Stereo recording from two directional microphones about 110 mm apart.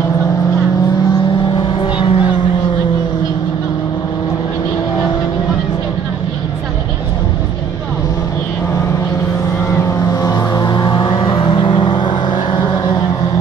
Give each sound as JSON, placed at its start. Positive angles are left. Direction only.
{"t": 1.5, "sound": "vehicle", "side_deg": 50}
{"t": 9.8, "sound": "vehicle", "side_deg": 35}